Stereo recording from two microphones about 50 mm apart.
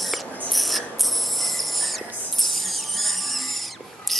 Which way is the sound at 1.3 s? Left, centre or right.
Centre.